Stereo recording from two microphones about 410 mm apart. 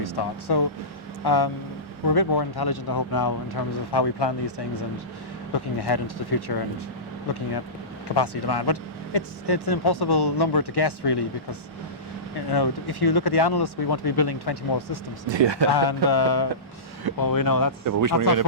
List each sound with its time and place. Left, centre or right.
0.0 s speech: left
12.5 s speech: left
15.3 s speech: right
15.7 s speech: left
17.2 s speech: left
17.8 s speech: right